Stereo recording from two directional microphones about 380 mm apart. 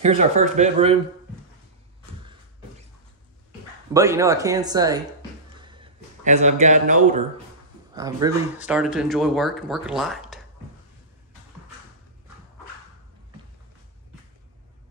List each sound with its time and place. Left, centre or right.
0.0 s speech: centre
3.9 s speech: centre
5.6 s a sound: centre
7.9 s speech: centre